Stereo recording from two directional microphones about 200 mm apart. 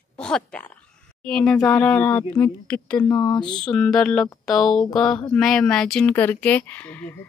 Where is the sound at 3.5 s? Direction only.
5° left (ahead or behind).